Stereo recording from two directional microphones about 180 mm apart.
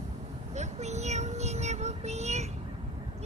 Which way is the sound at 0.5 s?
40° right (ahead or behind).